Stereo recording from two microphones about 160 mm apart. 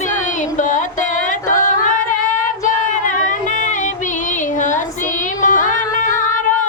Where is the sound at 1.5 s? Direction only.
55° left (ahead or behind).